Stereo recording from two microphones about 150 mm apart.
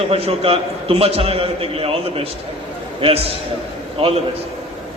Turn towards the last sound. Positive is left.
turn(degrees=-40)  # may be behind; listen again after turning